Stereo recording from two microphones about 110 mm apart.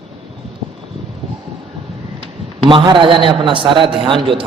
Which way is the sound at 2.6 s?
45° right (ahead or behind).